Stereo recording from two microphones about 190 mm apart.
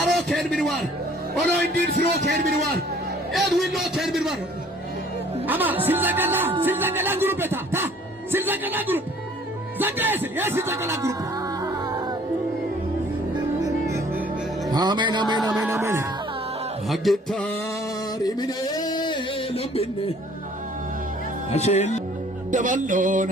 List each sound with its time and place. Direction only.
0.0 s a sound: centre (ahead or behind)
1.6 s music: 55° right (ahead or behind)
3.3 s a man's voice: centre (ahead or behind)
5.5 s speech: 10° right (ahead or behind)
13.6 s music: 15° right (ahead or behind)
14.7 s speech: 20° right (ahead or behind)
15.4 s a man's voice: 5° right (ahead or behind)
15.7 s speech: 15° right (ahead or behind)
16.9 s a man's voice: centre (ahead or behind)
18.2 s a sound: 20° left (ahead or behind)
21.5 s speech: 35° left (ahead or behind)
22.5 s music: 40° right (ahead or behind)